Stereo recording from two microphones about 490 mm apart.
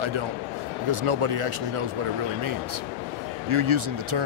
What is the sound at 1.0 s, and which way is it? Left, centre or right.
Speech, right.